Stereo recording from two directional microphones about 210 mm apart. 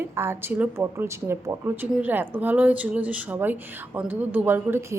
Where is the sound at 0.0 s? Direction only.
10° right (ahead or behind).